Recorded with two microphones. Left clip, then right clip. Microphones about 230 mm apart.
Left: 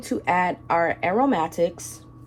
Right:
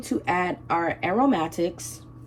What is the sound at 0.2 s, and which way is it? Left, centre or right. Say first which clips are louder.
Speech: left 4 dB; left.